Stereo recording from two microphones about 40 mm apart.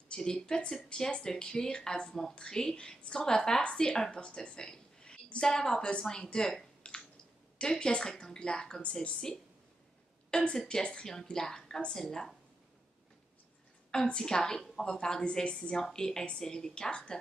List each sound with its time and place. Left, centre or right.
0.2 s a woman's voice: centre
6.8 s a sound: left
7.5 s a woman's voice: centre
14.0 s a woman's voice: centre